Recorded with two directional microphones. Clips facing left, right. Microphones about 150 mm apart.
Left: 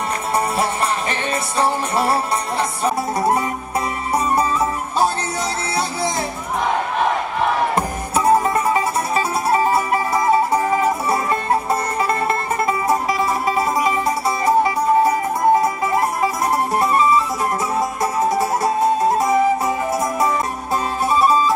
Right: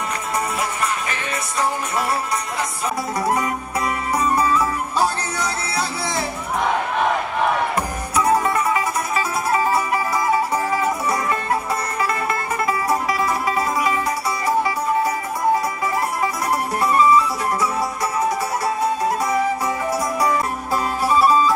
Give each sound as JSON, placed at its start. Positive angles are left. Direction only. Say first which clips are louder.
{"t": 1.6, "sound": "music", "louder": "left 3 dB", "side_deg": 30}
{"t": 7.7, "sound": "music", "louder": "left 2 dB", "side_deg": 30}
{"t": 11.7, "sound": "music", "louder": "left 3 dB", "side_deg": 30}
{"t": 14.4, "sound": "music", "louder": "left 4 dB", "side_deg": 25}
{"t": 16.2, "sound": "music", "louder": "left 3 dB", "side_deg": 25}